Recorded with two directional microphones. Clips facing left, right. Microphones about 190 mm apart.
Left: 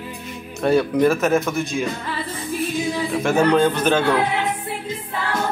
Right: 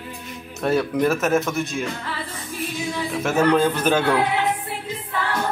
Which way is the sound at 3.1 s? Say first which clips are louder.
Left 1 dB; 5° right (ahead or behind).